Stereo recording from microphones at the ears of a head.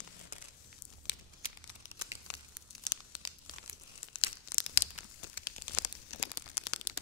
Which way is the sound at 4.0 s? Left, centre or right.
Left.